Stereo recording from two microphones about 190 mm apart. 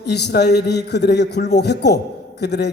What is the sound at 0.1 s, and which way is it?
A man's voice, 60° left (ahead or behind).